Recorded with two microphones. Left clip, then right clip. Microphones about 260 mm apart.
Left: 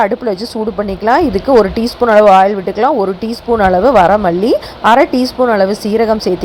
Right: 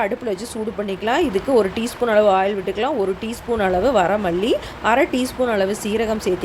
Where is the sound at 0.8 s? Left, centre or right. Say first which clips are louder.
Left 9 dB; centre.